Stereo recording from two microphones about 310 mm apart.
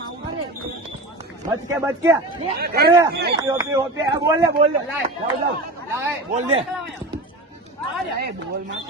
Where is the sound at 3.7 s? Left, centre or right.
Centre.